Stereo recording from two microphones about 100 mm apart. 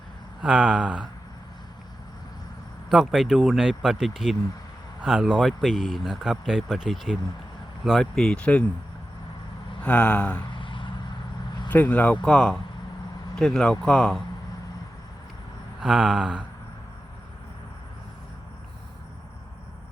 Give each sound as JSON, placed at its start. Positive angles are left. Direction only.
{"t": 0.4, "sound": "speech", "side_deg": -10}
{"t": 2.9, "sound": "speech", "side_deg": -5}
{"t": 9.8, "sound": "speech", "side_deg": 15}
{"t": 10.5, "sound": "vehicle", "side_deg": 55}
{"t": 11.7, "sound": "speech", "side_deg": 15}
{"t": 15.8, "sound": "speech", "side_deg": -10}